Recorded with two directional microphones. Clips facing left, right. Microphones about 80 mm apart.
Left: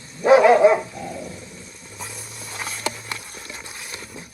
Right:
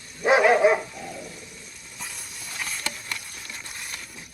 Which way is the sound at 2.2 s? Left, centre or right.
Left.